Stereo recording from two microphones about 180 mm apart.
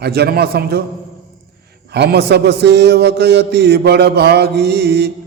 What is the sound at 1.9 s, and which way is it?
A man's voice, 65° right (ahead or behind).